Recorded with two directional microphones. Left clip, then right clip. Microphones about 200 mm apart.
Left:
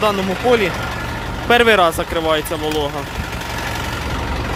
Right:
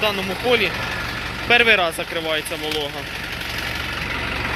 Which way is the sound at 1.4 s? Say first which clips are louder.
Left 3 dB; 25° left (ahead or behind).